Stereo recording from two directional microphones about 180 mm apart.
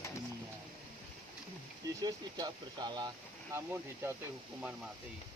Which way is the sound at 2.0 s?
25° right (ahead or behind).